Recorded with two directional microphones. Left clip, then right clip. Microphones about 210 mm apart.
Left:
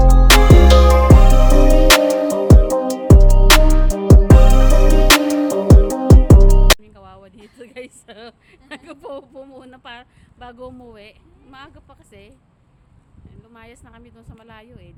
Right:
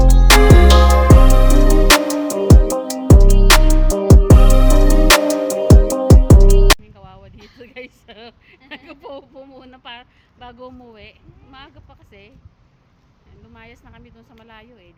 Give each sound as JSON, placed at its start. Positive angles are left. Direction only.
{"t": 0.0, "sound": "music", "side_deg": 0}
{"t": 6.8, "sound": "music", "side_deg": 15}
{"t": 7.6, "sound": "a sound", "side_deg": 20}
{"t": 11.5, "sound": "speech", "side_deg": 20}
{"t": 13.5, "sound": "speech", "side_deg": 15}